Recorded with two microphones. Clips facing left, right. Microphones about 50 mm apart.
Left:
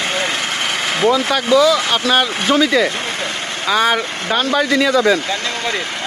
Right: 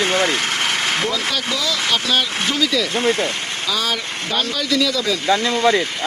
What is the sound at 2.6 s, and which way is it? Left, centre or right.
Speech, left.